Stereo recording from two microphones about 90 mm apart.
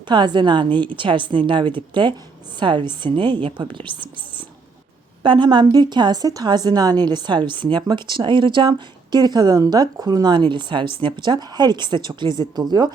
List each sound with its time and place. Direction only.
0.1 s a woman's voice: 60° right (ahead or behind)
9.1 s speech: 50° right (ahead or behind)